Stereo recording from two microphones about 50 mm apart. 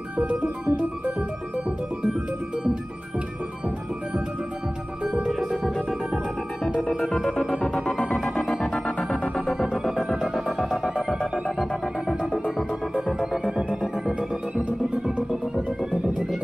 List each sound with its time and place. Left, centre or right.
0.2 s organ: right
5.2 s music: centre
8.8 s music: centre
9.3 s music: centre
12.4 s music: centre
15.9 s music: centre